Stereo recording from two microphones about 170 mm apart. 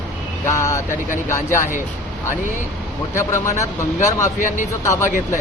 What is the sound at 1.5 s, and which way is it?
Speech, 50° left (ahead or behind).